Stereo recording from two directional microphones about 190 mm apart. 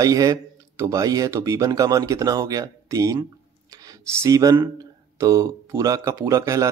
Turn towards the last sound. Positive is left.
turn(degrees=-15)  # may be behind; listen again after turning